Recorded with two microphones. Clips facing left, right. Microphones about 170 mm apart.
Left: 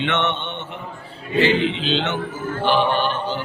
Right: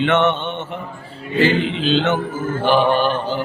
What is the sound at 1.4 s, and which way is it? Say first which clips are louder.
Mantra: right 3 dB; 45° right (ahead or behind).